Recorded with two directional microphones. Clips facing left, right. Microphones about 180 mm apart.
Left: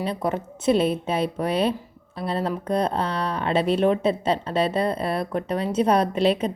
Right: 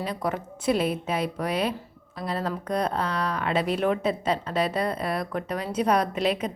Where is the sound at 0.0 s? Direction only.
25° left (ahead or behind).